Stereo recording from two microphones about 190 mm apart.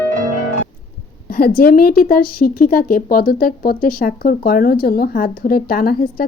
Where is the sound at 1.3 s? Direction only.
55° left (ahead or behind).